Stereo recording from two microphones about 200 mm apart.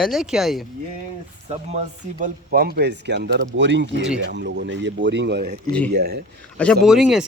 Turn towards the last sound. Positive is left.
turn(degrees=0)  # may be behind; listen again after turning